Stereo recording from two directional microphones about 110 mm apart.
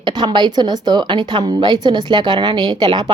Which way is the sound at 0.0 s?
40° right (ahead or behind).